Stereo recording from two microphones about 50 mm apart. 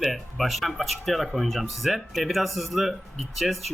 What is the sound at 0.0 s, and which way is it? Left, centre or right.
Speech, centre.